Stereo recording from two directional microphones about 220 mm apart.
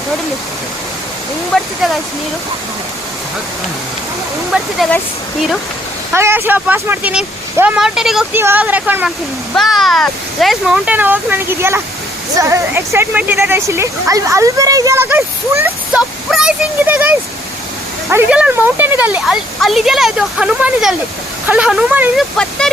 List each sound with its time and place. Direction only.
1.5 s speech: centre (ahead or behind)
4.5 s speech: centre (ahead or behind)
6.1 s speech: 10° right (ahead or behind)
22.4 s speech: 5° left (ahead or behind)